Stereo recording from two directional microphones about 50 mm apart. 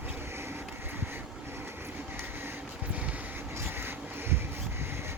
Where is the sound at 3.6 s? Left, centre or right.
Right.